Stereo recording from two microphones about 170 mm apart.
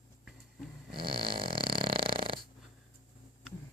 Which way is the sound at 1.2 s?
30° right (ahead or behind).